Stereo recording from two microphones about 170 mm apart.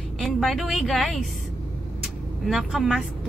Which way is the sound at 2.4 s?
Centre (ahead or behind).